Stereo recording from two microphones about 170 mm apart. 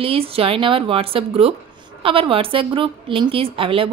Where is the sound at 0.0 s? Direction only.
35° right (ahead or behind).